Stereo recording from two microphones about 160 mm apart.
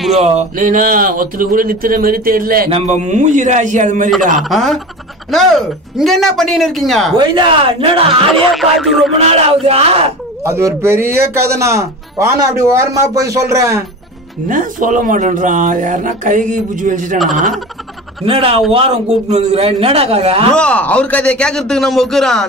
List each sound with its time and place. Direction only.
0.1 s speech: 40° right (ahead or behind); by 2.7 s 65° right (ahead or behind)
2.7 s a man's voice: 45° right (ahead or behind)
4.4 s speech: centre (ahead or behind)
7.2 s a man's voice: 30° right (ahead or behind)
8.3 s speech: centre (ahead or behind)
9.2 s a man's voice: 40° right (ahead or behind)
10.4 s a man's voice: 15° right (ahead or behind)
14.5 s speech: 55° right (ahead or behind)
17.2 s speech: centre (ahead or behind)
18.2 s a man's voice: 35° right (ahead or behind)
20.5 s speech: 5° left (ahead or behind)